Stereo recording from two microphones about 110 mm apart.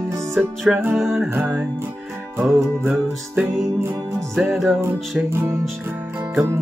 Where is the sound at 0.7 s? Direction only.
20° right (ahead or behind).